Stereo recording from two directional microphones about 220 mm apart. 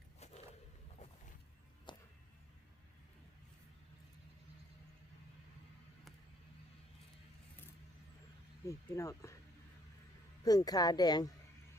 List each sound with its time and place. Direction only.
1.9 s a sound: 20° left (ahead or behind)
8.6 s a woman's voice: 15° left (ahead or behind)
10.4 s a woman's voice: 15° left (ahead or behind)